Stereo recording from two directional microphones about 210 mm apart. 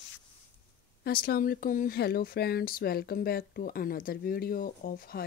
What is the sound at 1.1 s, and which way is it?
Speech, 45° left (ahead or behind).